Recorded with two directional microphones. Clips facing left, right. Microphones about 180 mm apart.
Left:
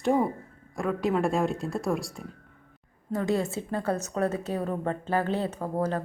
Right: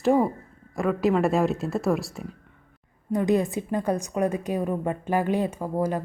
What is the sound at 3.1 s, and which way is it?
A woman's voice, 15° right (ahead or behind).